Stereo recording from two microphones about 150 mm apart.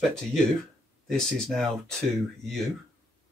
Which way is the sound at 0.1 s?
Centre (ahead or behind).